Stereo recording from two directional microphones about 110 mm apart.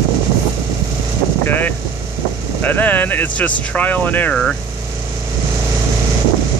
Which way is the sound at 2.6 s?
15° left (ahead or behind).